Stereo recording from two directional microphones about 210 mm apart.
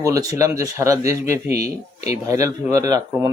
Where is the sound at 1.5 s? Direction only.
30° left (ahead or behind).